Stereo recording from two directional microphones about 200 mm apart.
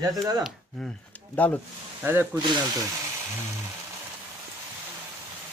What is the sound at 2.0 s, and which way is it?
Speech, 10° right (ahead or behind).